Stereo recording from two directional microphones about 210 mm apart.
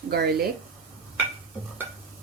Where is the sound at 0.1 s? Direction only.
50° right (ahead or behind).